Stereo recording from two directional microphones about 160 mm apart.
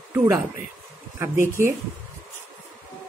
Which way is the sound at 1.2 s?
15° right (ahead or behind).